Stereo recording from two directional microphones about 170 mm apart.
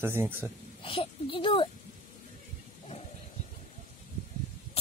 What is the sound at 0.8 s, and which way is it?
Speech, 30° left (ahead or behind).